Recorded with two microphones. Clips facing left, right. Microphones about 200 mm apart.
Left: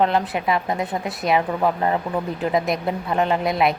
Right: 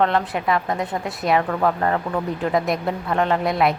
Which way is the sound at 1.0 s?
Centre (ahead or behind).